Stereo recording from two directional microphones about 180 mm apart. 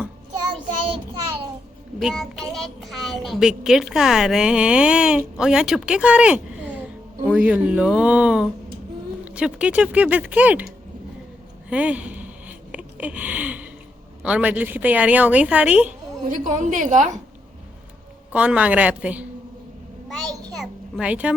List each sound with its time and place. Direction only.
2.0 s a child's voice: centre (ahead or behind)
11.7 s a sound: 5° right (ahead or behind)
14.2 s a woman's voice: 5° right (ahead or behind)
16.3 s a woman's voice: 45° right (ahead or behind)
18.3 s a woman's voice: 5° right (ahead or behind)
20.1 s a sound: centre (ahead or behind)